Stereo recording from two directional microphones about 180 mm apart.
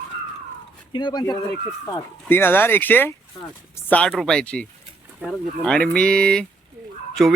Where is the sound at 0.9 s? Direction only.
25° left (ahead or behind).